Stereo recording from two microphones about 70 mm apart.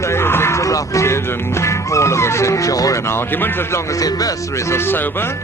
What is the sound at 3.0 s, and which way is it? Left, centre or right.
Speech, left.